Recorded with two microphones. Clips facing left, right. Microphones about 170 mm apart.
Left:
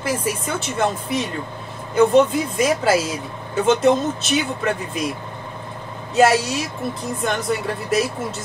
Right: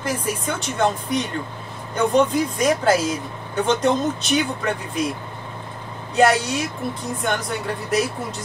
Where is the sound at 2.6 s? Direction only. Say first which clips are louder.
Left 1 dB; 5° left (ahead or behind).